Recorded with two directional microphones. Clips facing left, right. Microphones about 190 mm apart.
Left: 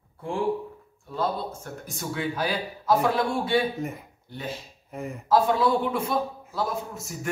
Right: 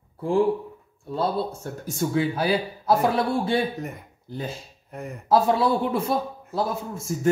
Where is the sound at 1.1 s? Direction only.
30° right (ahead or behind).